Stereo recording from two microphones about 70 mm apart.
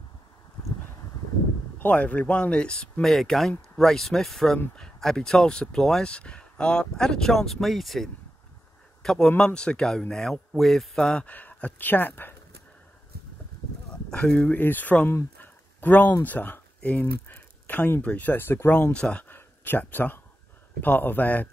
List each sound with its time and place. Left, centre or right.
1.8 s speech: left
3.1 s speech: centre
11.2 s speech: left
14.1 s speech: centre
14.5 s speech: left
15.0 s a sound: left
16.3 s speech: left
19.2 s a sound: left
20.8 s speech: left